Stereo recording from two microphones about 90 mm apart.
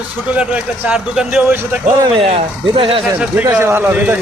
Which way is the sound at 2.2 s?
85° right.